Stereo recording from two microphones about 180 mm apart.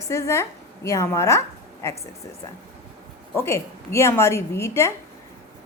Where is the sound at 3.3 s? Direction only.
15° left (ahead or behind).